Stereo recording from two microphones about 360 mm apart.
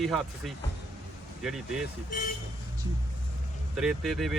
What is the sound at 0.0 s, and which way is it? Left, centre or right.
Speech, centre.